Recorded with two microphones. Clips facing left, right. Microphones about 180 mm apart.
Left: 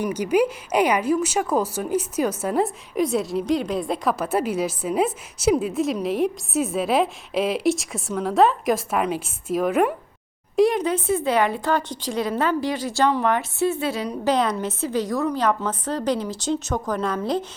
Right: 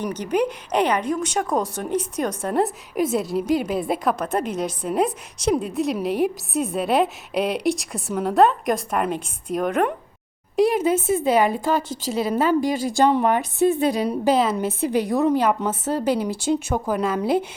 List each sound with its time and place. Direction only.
0.0 s a woman's voice: 10° left (ahead or behind); by 17.2 s 10° right (ahead or behind)